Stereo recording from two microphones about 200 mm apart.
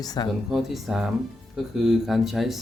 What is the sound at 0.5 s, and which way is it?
Speech, centre (ahead or behind).